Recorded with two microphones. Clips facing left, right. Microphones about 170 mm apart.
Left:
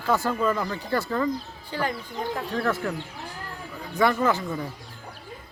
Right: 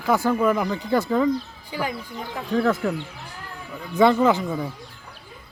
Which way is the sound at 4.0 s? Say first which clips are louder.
Right 5 dB; 20° right (ahead or behind).